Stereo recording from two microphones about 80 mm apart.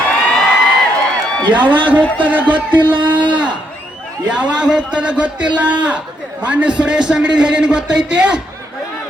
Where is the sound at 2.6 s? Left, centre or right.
Right.